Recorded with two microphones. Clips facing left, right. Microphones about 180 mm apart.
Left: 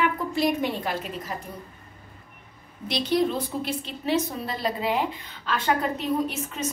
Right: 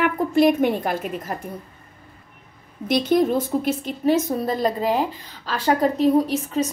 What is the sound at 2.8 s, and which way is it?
A woman's voice, 50° right (ahead or behind).